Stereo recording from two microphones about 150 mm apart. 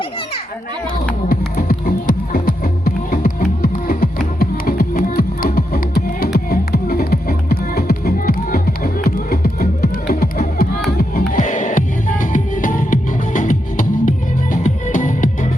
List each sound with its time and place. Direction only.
1.3 s music: 80° left
11.3 s music: 60° left (ahead or behind)